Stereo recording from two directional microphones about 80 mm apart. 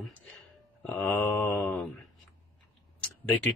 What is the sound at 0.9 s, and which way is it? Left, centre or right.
Mantra, centre.